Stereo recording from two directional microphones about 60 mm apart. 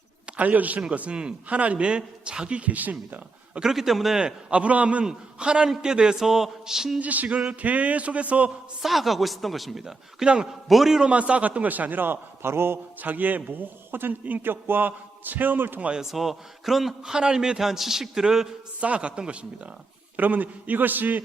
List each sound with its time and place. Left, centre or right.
0.3 s a man's voice: right
3.6 s a man's voice: centre
7.0 s a man's voice: right
8.8 s a man's voice: centre
11.1 s a man's voice: right
13.0 s a man's voice: right
16.0 s a man's voice: centre
18.8 s a man's voice: centre
20.1 s a man's voice: right